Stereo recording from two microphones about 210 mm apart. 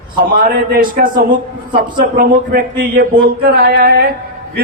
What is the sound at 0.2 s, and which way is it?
A man's voice, 45° right (ahead or behind).